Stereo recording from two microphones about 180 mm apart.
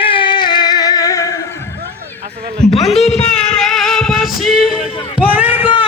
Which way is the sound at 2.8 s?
35° left (ahead or behind).